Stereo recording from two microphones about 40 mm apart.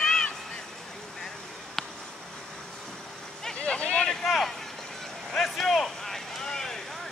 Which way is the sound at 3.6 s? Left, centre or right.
Left.